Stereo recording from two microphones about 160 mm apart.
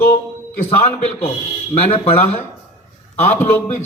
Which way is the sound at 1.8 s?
40° left (ahead or behind).